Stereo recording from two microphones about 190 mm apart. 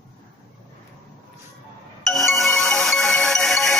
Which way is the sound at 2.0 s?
Centre (ahead or behind).